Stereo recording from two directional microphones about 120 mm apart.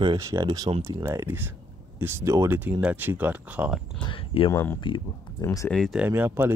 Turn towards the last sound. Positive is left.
turn(degrees=-15)  # may be behind; listen again after turning